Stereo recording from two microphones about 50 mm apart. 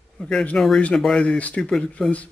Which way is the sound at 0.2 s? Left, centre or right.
Centre.